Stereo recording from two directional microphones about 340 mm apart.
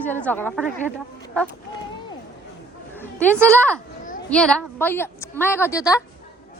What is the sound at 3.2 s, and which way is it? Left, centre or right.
A woman's voice, centre.